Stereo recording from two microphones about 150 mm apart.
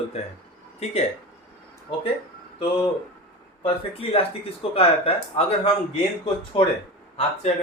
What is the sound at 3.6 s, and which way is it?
Speech, 40° left (ahead or behind).